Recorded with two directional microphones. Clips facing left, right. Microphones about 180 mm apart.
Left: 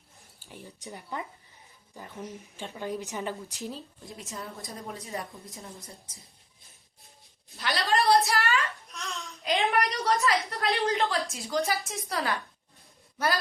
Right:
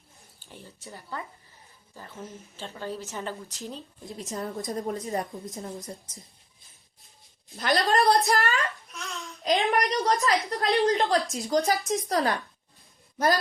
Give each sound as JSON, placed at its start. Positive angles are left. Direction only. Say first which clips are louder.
{"t": 0.5, "sound": "speech", "louder": "left 1 dB", "side_deg": 15}
{"t": 3.7, "sound": "speech", "louder": "even", "side_deg": 0}
{"t": 4.2, "sound": "a woman's voice", "louder": "right 8 dB", "side_deg": -40}
{"t": 7.5, "sound": "a woman's voice", "louder": "right 4 dB", "side_deg": -40}
{"t": 8.9, "sound": "a sound", "louder": "right 1 dB", "side_deg": 0}
{"t": 9.4, "sound": "a woman's voice", "louder": "right 2 dB", "side_deg": -35}